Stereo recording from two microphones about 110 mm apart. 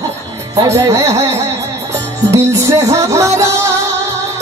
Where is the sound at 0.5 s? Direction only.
30° right (ahead or behind).